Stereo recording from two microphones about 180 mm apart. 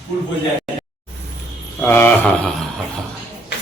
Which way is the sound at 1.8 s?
10° left (ahead or behind).